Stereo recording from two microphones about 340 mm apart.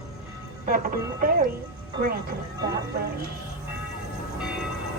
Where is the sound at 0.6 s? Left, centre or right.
Right.